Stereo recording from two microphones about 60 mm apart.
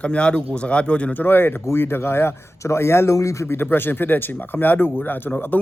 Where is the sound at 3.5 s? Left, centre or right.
Left.